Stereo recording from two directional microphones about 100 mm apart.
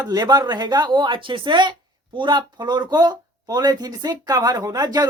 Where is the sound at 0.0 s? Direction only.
40° right (ahead or behind).